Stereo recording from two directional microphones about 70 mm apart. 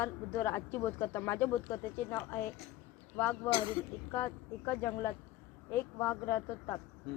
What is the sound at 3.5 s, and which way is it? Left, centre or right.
Speech, left.